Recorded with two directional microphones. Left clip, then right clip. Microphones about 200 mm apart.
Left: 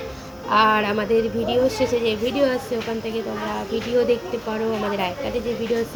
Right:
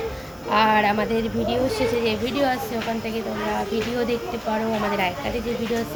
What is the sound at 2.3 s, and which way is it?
Speech, 5° right (ahead or behind).